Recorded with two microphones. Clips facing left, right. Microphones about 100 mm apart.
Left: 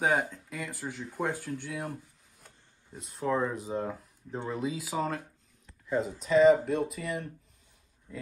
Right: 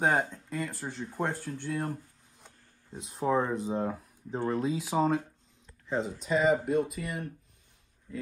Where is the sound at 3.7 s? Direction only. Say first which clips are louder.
Right 2 dB; 10° right (ahead or behind).